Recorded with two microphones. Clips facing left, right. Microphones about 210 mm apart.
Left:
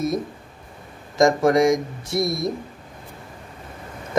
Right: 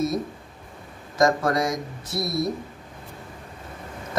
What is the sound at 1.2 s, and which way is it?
Speech, 20° left (ahead or behind).